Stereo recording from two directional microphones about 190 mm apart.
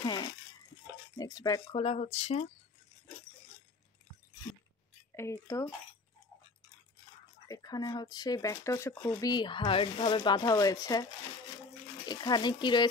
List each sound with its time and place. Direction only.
0.0 s a sound: 25° left (ahead or behind)
1.1 s speech: 20° left (ahead or behind)
5.1 s speech: 15° left (ahead or behind)
7.4 s speech: 20° left (ahead or behind)
12.1 s speech: 20° left (ahead or behind)